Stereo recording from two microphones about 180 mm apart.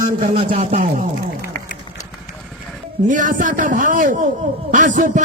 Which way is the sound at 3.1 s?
45° right (ahead or behind).